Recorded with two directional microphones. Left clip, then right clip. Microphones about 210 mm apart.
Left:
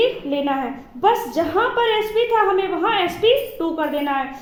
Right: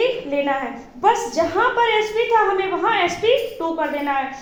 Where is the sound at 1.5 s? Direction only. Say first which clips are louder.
Right 1 dB; 45° left (ahead or behind).